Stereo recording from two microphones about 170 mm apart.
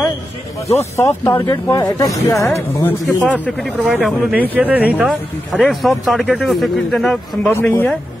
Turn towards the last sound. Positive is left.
turn(degrees=10)  # may be behind; listen again after turning